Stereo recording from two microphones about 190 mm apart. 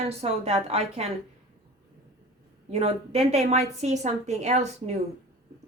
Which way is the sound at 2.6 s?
35° right (ahead or behind).